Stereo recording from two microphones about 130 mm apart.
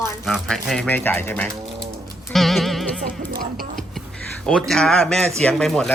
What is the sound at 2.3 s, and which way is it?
Music, centre (ahead or behind).